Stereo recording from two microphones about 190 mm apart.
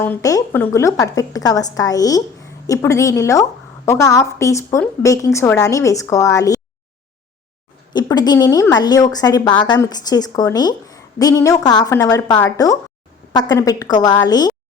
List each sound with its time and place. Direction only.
0.0 s a woman's voice: 15° left (ahead or behind)
8.1 s a woman's voice: 20° left (ahead or behind)